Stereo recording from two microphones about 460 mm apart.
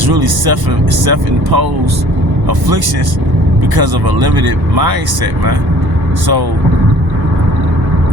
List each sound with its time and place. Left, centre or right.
0.0 s speech: right